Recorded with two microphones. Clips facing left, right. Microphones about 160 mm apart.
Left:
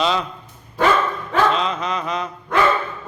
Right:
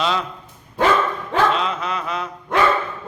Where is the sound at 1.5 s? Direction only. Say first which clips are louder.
Left 1 dB; 5° right (ahead or behind).